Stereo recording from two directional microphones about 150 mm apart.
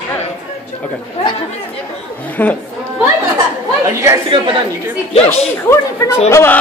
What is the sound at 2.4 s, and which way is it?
Speech, 10° left (ahead or behind).